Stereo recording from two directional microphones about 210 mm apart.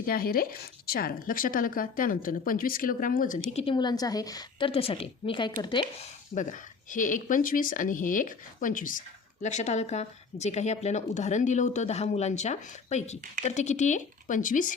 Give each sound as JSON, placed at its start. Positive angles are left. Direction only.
{"t": 0.0, "sound": "speech", "side_deg": 45}
{"t": 3.5, "sound": "a woman's voice", "side_deg": 25}
{"t": 6.3, "sound": "speech", "side_deg": 40}